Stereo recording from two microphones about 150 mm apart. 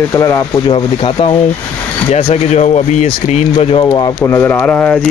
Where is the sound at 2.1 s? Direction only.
45° left (ahead or behind).